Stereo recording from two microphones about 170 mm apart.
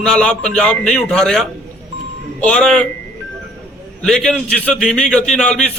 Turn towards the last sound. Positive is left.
turn(degrees=5)  # may be behind; listen again after turning